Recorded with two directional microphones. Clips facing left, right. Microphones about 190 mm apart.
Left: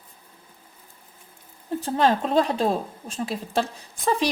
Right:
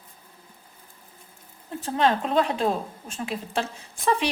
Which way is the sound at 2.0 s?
35° left (ahead or behind).